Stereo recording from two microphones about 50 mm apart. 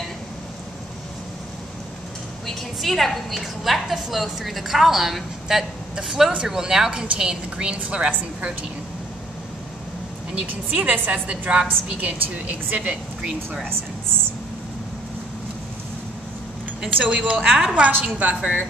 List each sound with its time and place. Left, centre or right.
2.4 s a woman's voice: centre; by 8.1 s right
10.4 s a woman's voice: right
16.8 s a woman's voice: centre
18.3 s a woman's voice: centre